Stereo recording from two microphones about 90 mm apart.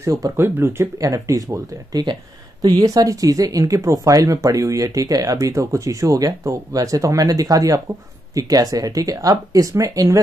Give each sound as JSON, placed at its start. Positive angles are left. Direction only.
{"t": 0.0, "sound": "speech", "side_deg": -40}
{"t": 0.4, "sound": "speech", "side_deg": -25}
{"t": 0.9, "sound": "speech", "side_deg": -40}